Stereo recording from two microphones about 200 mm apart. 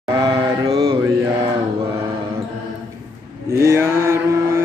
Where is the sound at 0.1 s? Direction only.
20° right (ahead or behind).